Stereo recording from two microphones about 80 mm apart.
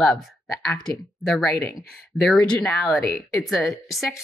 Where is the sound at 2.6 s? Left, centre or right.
Centre.